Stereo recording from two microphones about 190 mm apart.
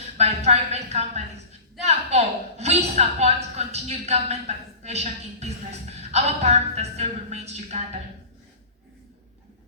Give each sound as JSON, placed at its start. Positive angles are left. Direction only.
{"t": 0.2, "sound": "a woman's voice", "side_deg": -35}